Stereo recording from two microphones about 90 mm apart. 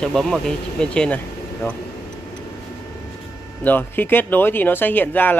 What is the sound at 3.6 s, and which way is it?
Speech, 20° left (ahead or behind).